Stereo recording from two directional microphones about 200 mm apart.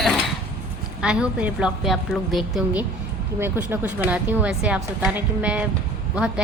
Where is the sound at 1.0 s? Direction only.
5° right (ahead or behind).